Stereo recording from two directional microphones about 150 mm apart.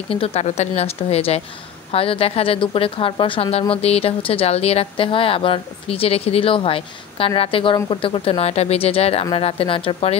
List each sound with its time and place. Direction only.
0.1 s a woman's voice: 40° left (ahead or behind)